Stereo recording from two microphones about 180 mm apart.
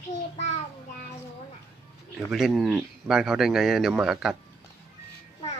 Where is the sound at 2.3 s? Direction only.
Centre (ahead or behind).